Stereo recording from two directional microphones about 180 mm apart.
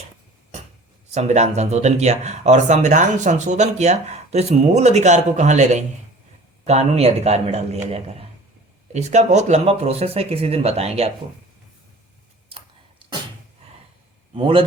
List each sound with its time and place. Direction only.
1.1 s speech: 40° right (ahead or behind)
14.3 s a man's voice: 30° right (ahead or behind)